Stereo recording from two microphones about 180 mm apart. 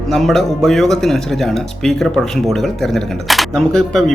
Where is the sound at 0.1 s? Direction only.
Centre (ahead or behind).